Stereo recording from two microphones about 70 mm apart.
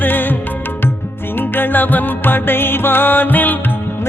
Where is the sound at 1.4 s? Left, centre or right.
Left.